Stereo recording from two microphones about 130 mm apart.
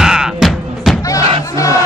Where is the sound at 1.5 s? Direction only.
25° left (ahead or behind).